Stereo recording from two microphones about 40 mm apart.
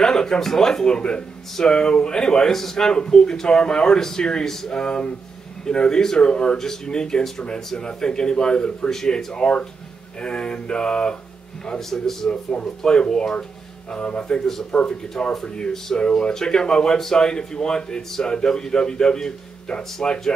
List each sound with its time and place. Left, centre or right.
0.0 s speech: centre
2.9 s a man's voice: centre
11.9 s speech: centre
12.3 s a man's voice: left